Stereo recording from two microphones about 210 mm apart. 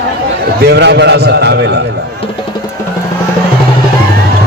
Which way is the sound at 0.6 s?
50° right (ahead or behind).